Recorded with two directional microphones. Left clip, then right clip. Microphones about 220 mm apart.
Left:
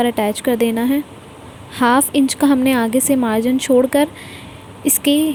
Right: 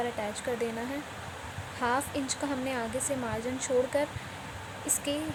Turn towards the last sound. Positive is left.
turn(degrees=40)  # may be behind; listen again after turning